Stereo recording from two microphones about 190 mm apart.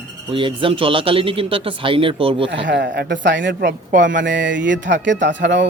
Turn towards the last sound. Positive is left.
turn(degrees=-70)  # may be behind; listen again after turning